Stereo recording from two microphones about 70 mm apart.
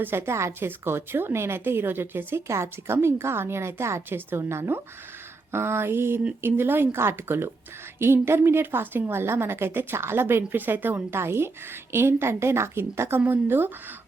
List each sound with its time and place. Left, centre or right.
0.0 s a woman's voice: right